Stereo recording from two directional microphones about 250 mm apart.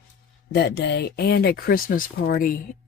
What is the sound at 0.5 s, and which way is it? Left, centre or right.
Speech, left.